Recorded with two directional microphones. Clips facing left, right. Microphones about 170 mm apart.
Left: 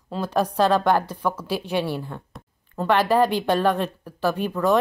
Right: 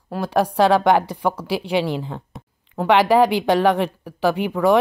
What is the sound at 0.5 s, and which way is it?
Speech, 75° right (ahead or behind).